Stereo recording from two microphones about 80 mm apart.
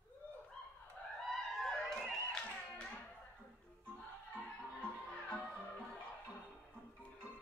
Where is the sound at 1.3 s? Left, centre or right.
Centre.